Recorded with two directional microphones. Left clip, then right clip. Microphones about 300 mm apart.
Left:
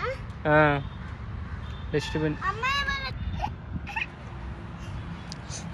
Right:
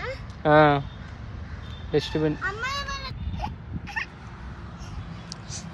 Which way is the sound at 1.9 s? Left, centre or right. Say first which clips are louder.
Right 4 dB; right.